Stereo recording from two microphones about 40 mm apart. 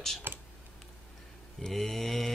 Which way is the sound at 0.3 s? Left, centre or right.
Right.